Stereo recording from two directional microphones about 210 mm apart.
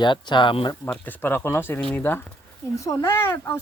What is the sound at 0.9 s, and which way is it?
Speech, 10° left (ahead or behind).